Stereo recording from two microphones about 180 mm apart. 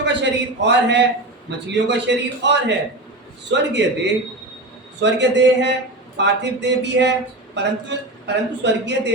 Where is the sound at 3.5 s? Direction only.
80° right.